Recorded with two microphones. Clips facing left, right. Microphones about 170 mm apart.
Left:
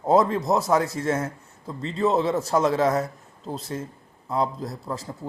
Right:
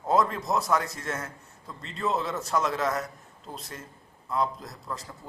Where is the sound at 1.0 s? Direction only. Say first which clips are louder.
Left 9 dB; 30° left (ahead or behind).